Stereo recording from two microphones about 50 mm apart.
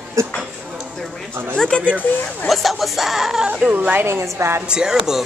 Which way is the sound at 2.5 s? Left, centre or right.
Centre.